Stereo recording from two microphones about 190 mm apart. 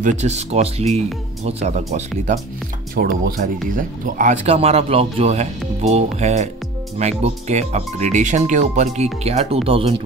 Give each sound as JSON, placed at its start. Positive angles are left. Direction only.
{"t": 0.0, "sound": "speech", "side_deg": -35}
{"t": 3.0, "sound": "speech", "side_deg": -50}